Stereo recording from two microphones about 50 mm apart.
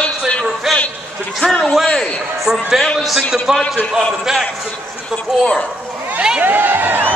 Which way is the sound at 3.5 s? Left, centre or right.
Centre.